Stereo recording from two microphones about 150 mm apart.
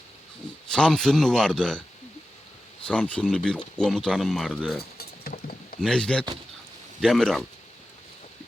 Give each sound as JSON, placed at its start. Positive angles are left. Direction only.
{"t": 0.7, "sound": "speech", "side_deg": 5}
{"t": 2.8, "sound": "speech", "side_deg": 10}
{"t": 4.8, "sound": "a sound", "side_deg": 90}
{"t": 5.8, "sound": "speech", "side_deg": 5}